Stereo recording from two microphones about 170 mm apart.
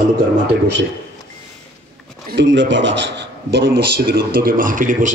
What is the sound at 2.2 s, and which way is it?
A man's voice, 90° right.